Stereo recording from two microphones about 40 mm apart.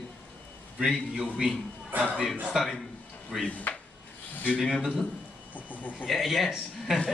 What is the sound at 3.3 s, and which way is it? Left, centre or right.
Speech, centre.